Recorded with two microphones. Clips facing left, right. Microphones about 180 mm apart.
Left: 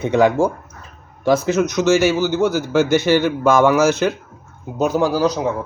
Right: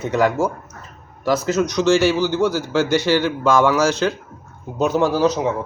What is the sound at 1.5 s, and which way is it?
Speech, 10° left (ahead or behind).